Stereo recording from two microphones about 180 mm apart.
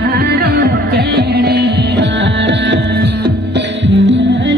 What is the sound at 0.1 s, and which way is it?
Music, 65° right (ahead or behind).